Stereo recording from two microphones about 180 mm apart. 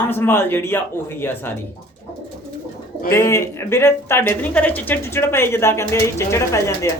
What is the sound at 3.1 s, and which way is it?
Speech, 15° left (ahead or behind).